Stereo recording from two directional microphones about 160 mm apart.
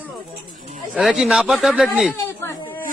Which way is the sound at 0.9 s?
Centre (ahead or behind).